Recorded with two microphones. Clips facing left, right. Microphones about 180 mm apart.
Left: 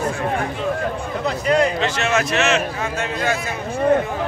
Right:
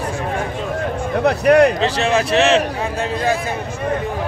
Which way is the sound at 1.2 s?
65° right (ahead or behind).